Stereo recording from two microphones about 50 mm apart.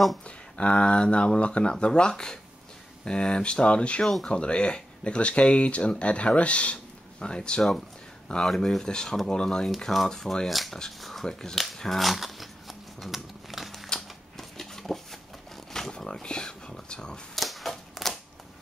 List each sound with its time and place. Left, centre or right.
0.6 s speech: left
4.0 s speech: centre
4.3 s speech: left
10.5 s speech: centre
11.5 s a sound: centre
16.1 s speech: centre
17.4 s a sound: centre